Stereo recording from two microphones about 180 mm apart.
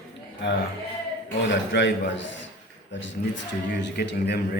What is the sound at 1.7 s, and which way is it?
Speech, 85° left.